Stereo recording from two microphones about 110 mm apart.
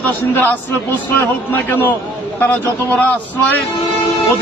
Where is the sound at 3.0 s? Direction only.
15° left (ahead or behind).